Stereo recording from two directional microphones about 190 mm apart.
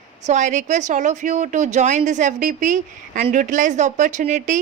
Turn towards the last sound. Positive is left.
turn(degrees=-40)  # may be behind; listen again after turning